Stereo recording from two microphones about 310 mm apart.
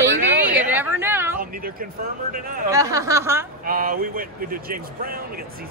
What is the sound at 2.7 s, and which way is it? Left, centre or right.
Speech, centre.